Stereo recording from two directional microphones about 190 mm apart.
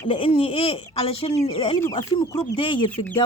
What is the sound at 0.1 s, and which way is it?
Speech, 30° left (ahead or behind).